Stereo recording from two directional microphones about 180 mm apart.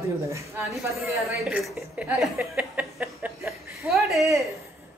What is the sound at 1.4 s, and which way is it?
A woman's voice, centre (ahead or behind).